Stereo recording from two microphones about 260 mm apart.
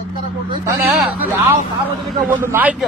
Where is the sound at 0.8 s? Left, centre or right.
Centre.